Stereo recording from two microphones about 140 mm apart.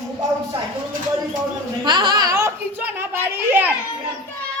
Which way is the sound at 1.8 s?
30° right (ahead or behind).